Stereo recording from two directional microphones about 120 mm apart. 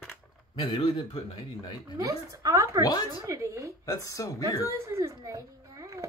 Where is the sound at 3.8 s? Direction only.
30° left (ahead or behind).